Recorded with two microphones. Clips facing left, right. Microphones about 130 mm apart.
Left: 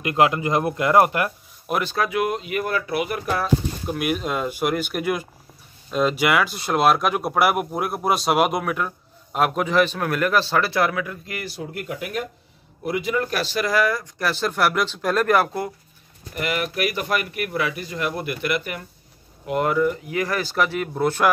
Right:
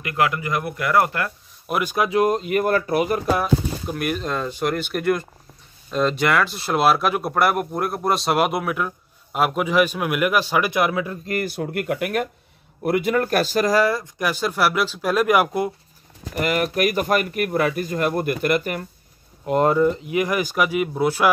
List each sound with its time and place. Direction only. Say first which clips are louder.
0.0 s speech: left 3 dB; 25° left (ahead or behind)
1.7 s speech: even; 10° right (ahead or behind)
2.0 s speech: right 4 dB; 35° right (ahead or behind)
3.8 s speech: left 1 dB; 5° left (ahead or behind); by 11.1 s 25° right (ahead or behind)
11.2 s speech: right 7 dB; 50° right (ahead or behind); by 14.0 s 30° right (ahead or behind)
14.1 s speech: right 1 dB; 15° right (ahead or behind)
16.3 s speech: right 4 dB; 40° right (ahead or behind); by 21.3 s 5° right (ahead or behind)